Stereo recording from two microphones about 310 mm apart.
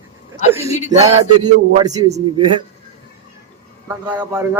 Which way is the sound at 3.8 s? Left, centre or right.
Centre.